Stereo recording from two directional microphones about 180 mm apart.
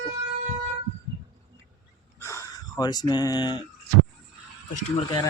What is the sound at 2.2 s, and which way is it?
Speech, 15° left (ahead or behind).